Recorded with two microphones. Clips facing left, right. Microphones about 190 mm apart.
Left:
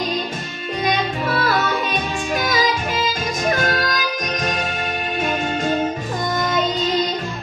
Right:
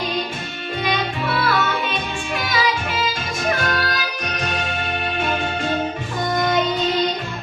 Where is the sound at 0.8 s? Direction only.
40° left (ahead or behind).